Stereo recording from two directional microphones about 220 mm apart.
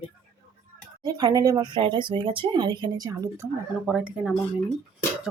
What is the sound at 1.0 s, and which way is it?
Speech, 15° right (ahead or behind).